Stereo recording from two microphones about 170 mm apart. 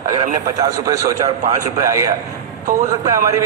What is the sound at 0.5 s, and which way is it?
A man's voice, 20° right (ahead or behind).